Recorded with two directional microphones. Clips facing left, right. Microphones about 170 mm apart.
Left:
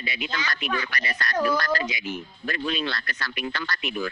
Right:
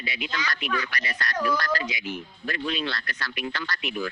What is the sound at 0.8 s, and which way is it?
Speech, 45° left (ahead or behind).